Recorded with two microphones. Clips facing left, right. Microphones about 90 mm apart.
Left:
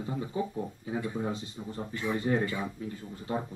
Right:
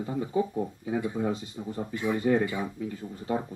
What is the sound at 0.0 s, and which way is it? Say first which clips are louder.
Speech: right 4 dB; 25° right (ahead or behind).